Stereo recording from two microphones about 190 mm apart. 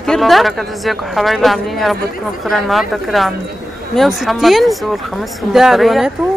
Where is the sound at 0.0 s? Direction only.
Centre (ahead or behind).